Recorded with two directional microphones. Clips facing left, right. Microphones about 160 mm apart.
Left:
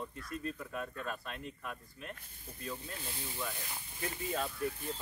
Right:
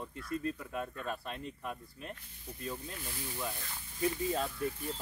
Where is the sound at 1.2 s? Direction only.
25° right (ahead or behind).